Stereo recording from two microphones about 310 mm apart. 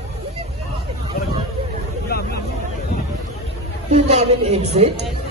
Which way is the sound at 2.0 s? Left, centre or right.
Left.